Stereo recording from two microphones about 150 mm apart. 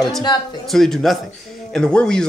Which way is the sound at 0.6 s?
Centre (ahead or behind).